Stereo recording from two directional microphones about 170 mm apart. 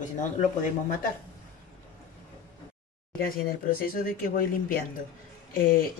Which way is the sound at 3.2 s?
60° left (ahead or behind).